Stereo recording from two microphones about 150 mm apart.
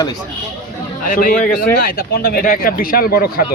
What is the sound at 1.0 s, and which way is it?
Speech, 70° left (ahead or behind).